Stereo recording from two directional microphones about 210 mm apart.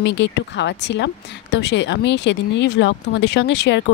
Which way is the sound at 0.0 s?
60° left (ahead or behind).